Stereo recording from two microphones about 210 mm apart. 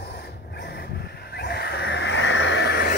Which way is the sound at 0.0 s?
50° left (ahead or behind).